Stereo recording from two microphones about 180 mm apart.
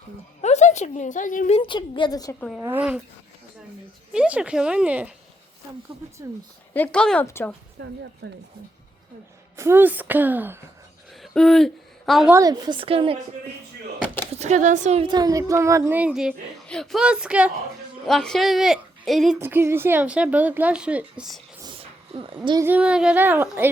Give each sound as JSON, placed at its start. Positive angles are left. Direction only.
{"t": 0.4, "sound": "a woman's voice", "side_deg": 40}
{"t": 1.5, "sound": "a woman's voice", "side_deg": 25}
{"t": 2.6, "sound": "speech", "side_deg": -10}
{"t": 4.1, "sound": "speech", "side_deg": -5}
{"t": 6.7, "sound": "speech", "side_deg": 10}
{"t": 8.2, "sound": "speech", "side_deg": -75}
{"t": 9.6, "sound": "speech", "side_deg": -15}
{"t": 11.1, "sound": "a sound", "side_deg": 0}
{"t": 12.3, "sound": "a woman's voice", "side_deg": -20}
{"t": 14.3, "sound": "speech", "side_deg": -40}
{"t": 15.0, "sound": "speech", "side_deg": -20}
{"t": 19.4, "sound": "speech", "side_deg": -10}
{"t": 21.6, "sound": "a sound", "side_deg": -30}
{"t": 22.6, "sound": "speech", "side_deg": -5}